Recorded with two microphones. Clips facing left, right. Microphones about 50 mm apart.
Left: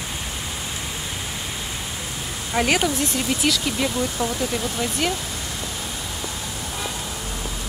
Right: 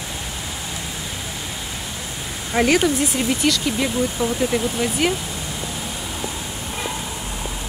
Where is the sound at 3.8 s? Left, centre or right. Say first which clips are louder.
Right 3 dB; centre.